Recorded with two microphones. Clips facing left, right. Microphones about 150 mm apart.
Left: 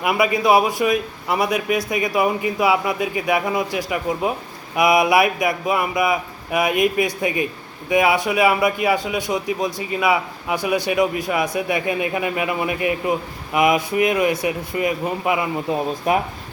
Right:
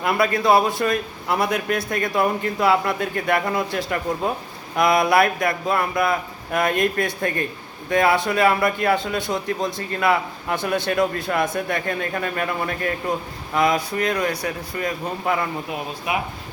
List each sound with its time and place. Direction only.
0.0 s a man's voice: 10° left (ahead or behind)
15.7 s speech: 40° left (ahead or behind)